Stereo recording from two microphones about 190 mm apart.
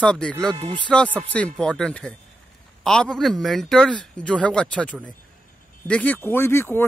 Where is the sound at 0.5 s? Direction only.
30° right (ahead or behind).